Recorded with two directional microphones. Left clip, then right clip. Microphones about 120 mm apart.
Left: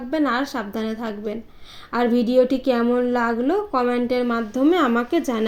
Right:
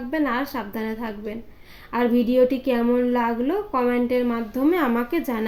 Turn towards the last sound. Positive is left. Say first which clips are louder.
# left 3 dB
turn(degrees=25)  # may be behind; listen again after turning